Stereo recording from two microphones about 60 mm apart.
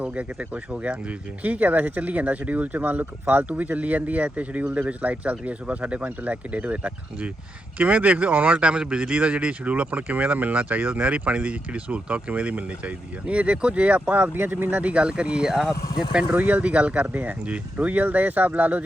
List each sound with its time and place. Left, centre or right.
0.0 s speech: right
14.2 s speech: right
14.5 s speech: right; by 15.7 s centre
16.3 s speech: right